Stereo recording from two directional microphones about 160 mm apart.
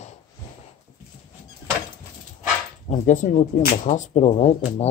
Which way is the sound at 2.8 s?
50° left (ahead or behind).